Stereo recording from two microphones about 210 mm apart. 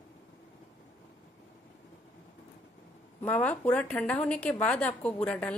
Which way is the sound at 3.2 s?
5° left (ahead or behind).